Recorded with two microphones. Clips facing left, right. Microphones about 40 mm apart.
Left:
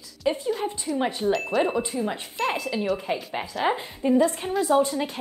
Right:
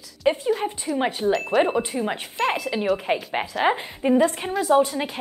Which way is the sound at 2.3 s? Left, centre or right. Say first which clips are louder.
Right 3 dB; centre.